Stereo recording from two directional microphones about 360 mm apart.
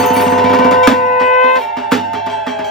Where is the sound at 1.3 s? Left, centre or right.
Centre.